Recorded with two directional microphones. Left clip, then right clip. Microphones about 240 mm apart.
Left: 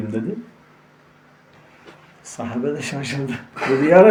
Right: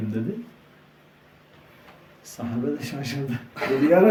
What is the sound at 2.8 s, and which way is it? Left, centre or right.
Speech, left.